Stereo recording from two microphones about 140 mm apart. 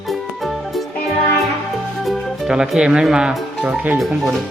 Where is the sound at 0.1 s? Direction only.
Centre (ahead or behind).